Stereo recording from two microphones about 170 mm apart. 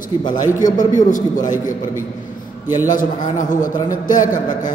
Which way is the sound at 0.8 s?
50° left (ahead or behind).